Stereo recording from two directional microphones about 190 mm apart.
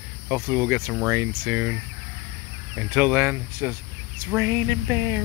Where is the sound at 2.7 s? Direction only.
10° right (ahead or behind).